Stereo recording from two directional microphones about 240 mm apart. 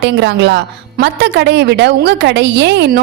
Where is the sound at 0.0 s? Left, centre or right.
Right.